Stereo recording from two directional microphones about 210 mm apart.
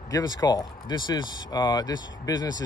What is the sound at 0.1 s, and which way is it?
Speech, 20° left (ahead or behind).